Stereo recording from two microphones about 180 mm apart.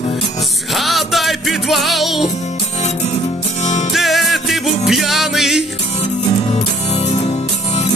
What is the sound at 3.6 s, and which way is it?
Music, 40° left (ahead or behind).